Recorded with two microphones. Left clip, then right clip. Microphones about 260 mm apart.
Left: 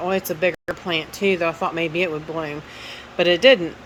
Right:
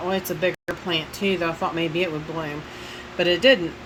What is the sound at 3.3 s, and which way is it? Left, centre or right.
Speech, left.